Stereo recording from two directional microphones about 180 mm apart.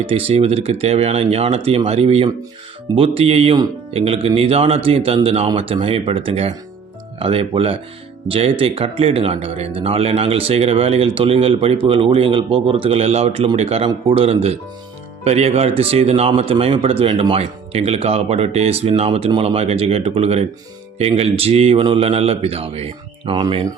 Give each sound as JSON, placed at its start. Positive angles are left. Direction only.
{"t": 0.0, "sound": "speech", "side_deg": -30}